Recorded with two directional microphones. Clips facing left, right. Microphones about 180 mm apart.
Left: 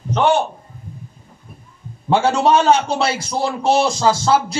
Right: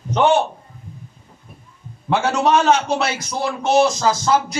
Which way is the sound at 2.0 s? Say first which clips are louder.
Left 3 dB; 30° left (ahead or behind).